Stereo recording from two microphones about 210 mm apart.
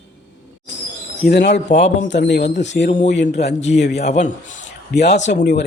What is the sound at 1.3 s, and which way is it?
A man's voice, 55° left (ahead or behind).